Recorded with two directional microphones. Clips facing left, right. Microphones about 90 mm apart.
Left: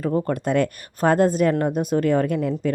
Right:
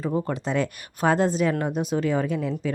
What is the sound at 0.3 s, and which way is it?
Speech, 55° left (ahead or behind).